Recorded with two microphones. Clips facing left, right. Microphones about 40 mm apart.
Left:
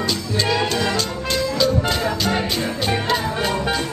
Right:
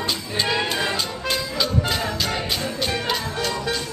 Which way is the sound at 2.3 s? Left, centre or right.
Left.